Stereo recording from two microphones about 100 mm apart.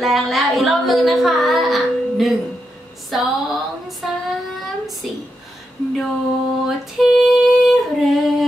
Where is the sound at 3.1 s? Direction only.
Centre (ahead or behind).